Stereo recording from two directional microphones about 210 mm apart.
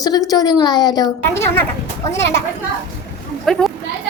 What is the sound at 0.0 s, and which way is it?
A woman's voice, 15° left (ahead or behind).